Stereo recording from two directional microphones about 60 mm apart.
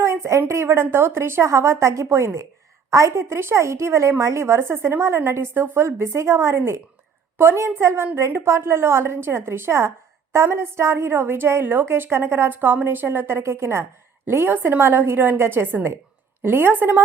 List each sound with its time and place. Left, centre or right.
0.0 s a woman's voice: right